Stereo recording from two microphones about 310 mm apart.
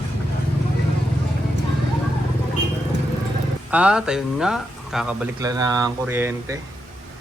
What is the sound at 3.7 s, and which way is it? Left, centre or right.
Speech, centre.